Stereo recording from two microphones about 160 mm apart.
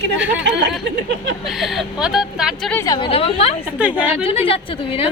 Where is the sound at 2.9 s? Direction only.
35° left (ahead or behind).